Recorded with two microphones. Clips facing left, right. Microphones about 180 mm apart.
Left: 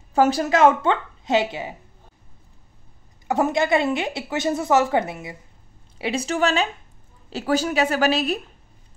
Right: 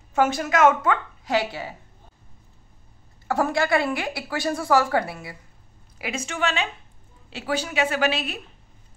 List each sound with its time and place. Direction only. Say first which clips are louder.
0.1 s a woman's voice: left 3 dB; 35° left (ahead or behind); by 1.8 s 20° left (ahead or behind)
3.3 s a woman's voice: left 2 dB; 20° left (ahead or behind)
5.9 s a woman's voice: left 6 dB; 30° left (ahead or behind)